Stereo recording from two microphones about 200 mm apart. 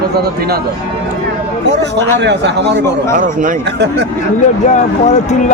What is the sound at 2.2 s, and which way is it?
Speech, 60° right (ahead or behind).